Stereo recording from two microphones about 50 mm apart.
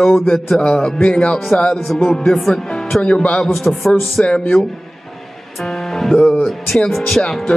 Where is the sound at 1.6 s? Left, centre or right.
Centre.